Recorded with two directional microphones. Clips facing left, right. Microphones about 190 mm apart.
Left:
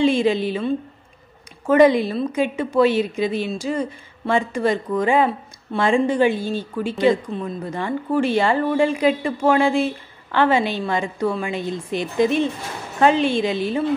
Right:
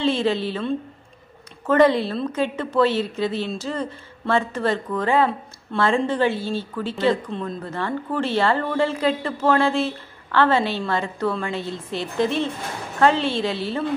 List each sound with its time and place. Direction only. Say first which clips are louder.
0.0 s a woman's voice: left 4 dB; 15° left (ahead or behind)
1.7 s speech: left 3 dB; 15° left (ahead or behind)